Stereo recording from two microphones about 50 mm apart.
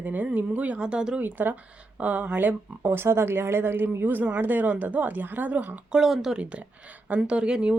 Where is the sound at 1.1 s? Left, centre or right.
Right.